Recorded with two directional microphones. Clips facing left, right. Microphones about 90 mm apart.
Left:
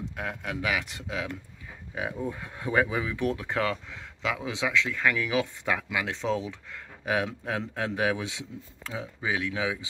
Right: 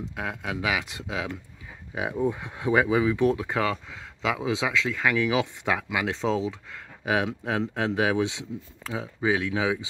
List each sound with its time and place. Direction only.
0.1 s speech: 10° right (ahead or behind)
2.3 s speech: 15° right (ahead or behind)
3.1 s speech: 20° right (ahead or behind)
3.4 s speech: 10° right (ahead or behind)